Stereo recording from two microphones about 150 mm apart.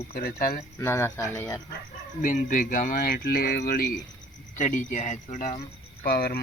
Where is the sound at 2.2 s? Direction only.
60° left (ahead or behind); by 3.9 s 85° left.